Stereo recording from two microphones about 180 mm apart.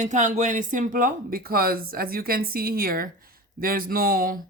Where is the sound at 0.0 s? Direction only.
45° right (ahead or behind).